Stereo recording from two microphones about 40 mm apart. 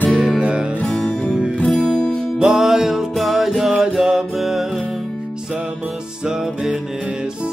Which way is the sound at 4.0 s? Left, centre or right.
Centre.